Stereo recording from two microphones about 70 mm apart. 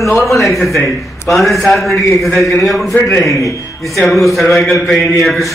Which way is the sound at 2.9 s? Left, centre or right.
Left.